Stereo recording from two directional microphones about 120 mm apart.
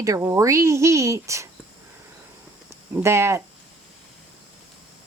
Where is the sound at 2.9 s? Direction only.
20° right (ahead or behind).